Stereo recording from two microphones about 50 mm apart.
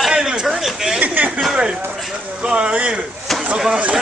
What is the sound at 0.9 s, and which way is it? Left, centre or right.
Speech, right.